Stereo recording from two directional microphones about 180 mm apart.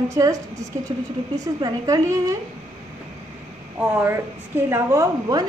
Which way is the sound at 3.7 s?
10° right (ahead or behind).